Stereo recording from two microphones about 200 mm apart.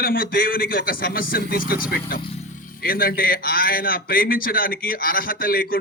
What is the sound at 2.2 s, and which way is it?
Speech, 30° left (ahead or behind).